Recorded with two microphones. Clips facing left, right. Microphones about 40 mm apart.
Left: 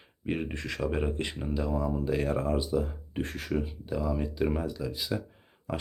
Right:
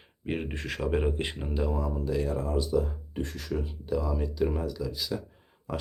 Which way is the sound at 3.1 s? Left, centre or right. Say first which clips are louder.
Left 2 dB; left.